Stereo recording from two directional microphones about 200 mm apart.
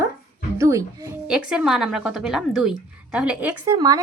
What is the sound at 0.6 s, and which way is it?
Speech, 15° right (ahead or behind).